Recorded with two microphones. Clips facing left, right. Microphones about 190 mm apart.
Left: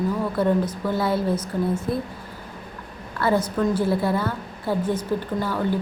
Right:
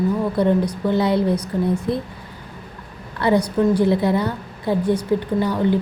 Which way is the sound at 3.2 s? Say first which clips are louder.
Right 4 dB; 15° right (ahead or behind).